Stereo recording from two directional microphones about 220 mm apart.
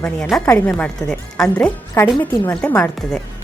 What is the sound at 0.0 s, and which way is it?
A woman's voice, 5° left (ahead or behind).